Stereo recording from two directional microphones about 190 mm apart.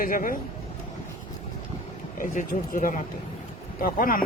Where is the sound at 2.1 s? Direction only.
45° left (ahead or behind).